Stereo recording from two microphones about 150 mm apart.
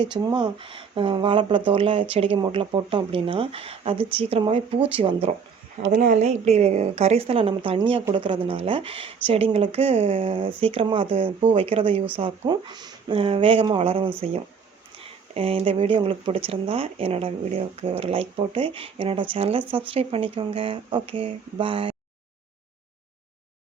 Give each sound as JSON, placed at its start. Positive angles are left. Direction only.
{"t": 0.0, "sound": "speech", "side_deg": -30}
{"t": 5.9, "sound": "speech", "side_deg": -80}
{"t": 6.1, "sound": "a woman's voice", "side_deg": -50}
{"t": 15.4, "sound": "speech", "side_deg": -40}